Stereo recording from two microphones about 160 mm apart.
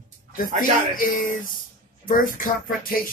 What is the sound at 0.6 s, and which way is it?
Speech, 60° left (ahead or behind).